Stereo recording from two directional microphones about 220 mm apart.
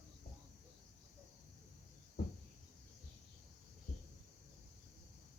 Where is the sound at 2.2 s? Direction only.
45° left (ahead or behind).